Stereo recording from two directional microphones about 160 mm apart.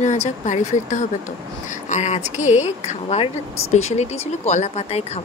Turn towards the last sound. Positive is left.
turn(degrees=40)  # may be behind; listen again after turning